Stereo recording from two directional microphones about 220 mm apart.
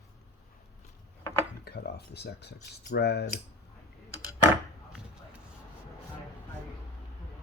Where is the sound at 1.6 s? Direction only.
45° left (ahead or behind).